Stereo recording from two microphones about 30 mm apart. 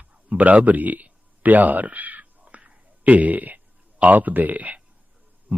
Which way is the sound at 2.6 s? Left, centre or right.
Right.